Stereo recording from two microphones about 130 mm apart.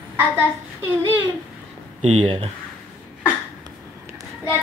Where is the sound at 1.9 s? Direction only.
60° right (ahead or behind).